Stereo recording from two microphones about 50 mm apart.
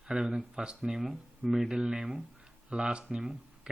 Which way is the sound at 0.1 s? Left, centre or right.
Centre.